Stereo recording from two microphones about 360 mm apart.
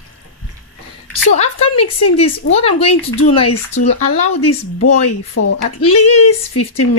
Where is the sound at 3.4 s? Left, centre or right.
Left.